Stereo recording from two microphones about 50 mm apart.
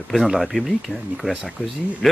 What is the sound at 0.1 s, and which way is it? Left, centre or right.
Speech, centre.